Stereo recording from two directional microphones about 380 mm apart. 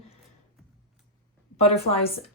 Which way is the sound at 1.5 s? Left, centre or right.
Centre.